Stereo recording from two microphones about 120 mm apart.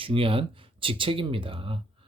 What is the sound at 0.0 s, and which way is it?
Speech, 50° right (ahead or behind).